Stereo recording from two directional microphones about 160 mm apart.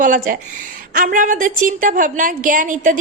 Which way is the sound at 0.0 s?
55° right (ahead or behind).